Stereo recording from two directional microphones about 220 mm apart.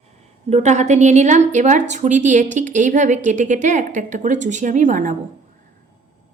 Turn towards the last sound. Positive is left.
turn(degrees=-35)  # may be behind; listen again after turning